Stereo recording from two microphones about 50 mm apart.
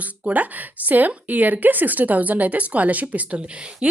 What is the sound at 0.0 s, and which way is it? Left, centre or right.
A woman's voice, right.